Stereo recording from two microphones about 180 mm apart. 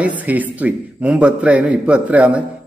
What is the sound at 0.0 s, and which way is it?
A man's voice, 10° right (ahead or behind).